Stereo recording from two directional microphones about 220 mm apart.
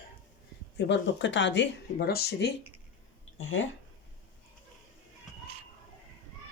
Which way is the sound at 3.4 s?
65° left (ahead or behind).